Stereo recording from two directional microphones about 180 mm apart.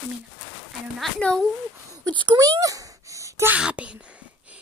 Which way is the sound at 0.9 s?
Centre (ahead or behind).